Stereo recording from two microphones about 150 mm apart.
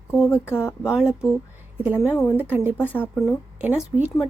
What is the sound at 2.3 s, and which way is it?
Speech, 10° right (ahead or behind).